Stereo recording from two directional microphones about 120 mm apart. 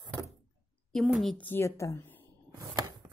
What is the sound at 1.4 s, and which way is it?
Speech, 20° left (ahead or behind).